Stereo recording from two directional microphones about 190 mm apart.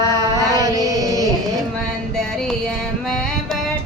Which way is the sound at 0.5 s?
20° right (ahead or behind).